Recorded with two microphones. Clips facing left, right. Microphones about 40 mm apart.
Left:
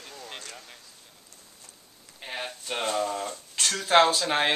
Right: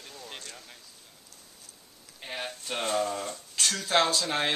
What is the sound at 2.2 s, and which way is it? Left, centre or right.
Speech, centre.